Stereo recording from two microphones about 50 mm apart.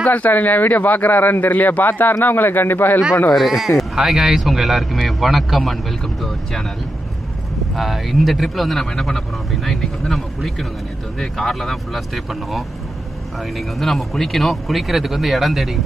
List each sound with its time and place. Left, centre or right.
0.0 s speech: left
3.3 s speech: centre
7.7 s speech: centre
13.6 s speech: centre